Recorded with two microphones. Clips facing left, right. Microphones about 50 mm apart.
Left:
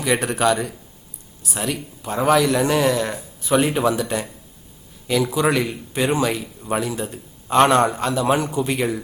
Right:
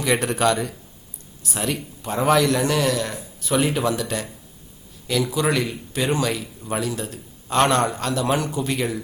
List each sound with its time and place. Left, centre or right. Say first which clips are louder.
0.0 s speech: left 1 dB; centre
2.5 s speech: left 2 dB; centre